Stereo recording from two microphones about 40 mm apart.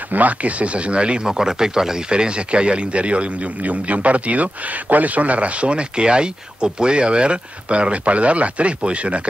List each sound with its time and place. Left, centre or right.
0.1 s speech: right
1.2 s speech: centre; by 9.3 s right